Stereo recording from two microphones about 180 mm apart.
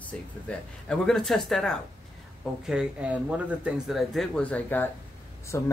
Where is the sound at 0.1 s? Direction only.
5° left (ahead or behind).